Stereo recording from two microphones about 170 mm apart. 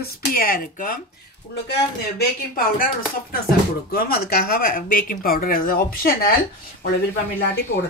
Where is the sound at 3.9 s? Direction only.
60° left (ahead or behind).